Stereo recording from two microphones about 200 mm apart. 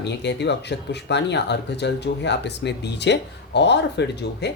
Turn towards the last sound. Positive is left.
turn(degrees=60)  # may be behind; listen again after turning